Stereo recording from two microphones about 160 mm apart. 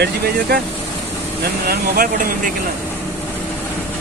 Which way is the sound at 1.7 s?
60° right (ahead or behind).